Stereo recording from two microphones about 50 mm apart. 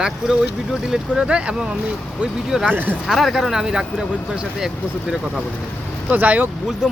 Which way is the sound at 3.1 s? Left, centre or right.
Centre.